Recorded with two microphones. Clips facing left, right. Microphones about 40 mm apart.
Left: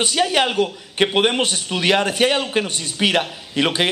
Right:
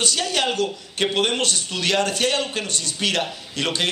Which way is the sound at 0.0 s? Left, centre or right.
Left.